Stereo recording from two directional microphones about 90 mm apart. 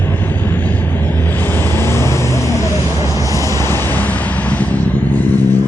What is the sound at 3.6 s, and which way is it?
Vehicle, 30° left (ahead or behind).